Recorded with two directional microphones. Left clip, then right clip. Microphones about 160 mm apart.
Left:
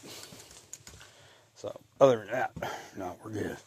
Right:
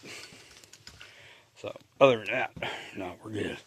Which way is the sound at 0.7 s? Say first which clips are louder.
Left 4 dB; 90° left.